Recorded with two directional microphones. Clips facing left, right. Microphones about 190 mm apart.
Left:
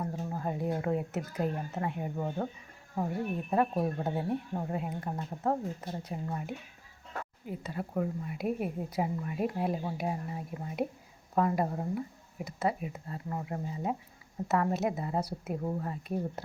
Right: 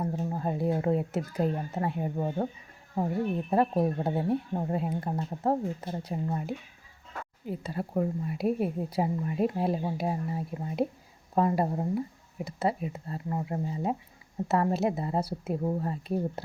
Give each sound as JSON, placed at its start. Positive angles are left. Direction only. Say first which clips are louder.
{"t": 0.0, "sound": "speech", "louder": "right 4 dB", "side_deg": -30}
{"t": 7.6, "sound": "speech", "louder": "right 3 dB", "side_deg": -35}